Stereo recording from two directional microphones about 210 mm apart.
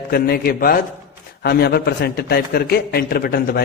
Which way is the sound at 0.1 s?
45° left (ahead or behind).